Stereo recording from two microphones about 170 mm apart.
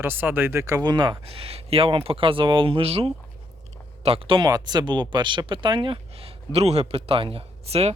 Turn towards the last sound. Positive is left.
turn(degrees=-35)  # may be behind; listen again after turning